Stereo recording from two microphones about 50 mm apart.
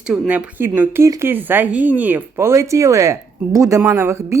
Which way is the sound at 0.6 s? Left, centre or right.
Right.